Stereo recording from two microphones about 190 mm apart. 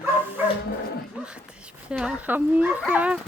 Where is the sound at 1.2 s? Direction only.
5° right (ahead or behind).